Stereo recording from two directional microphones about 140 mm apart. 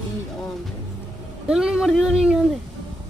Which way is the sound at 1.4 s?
5° right (ahead or behind).